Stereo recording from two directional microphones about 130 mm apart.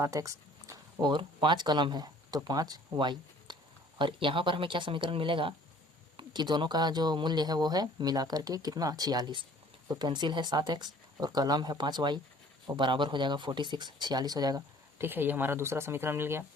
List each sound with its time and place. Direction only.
0.0 s a sound: 25° right (ahead or behind)
1.0 s speech: 40° right (ahead or behind)
14.9 s speech: 15° right (ahead or behind)